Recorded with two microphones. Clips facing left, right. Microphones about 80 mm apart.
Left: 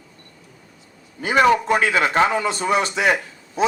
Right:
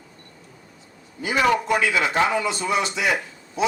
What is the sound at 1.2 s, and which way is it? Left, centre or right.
A man's voice, left.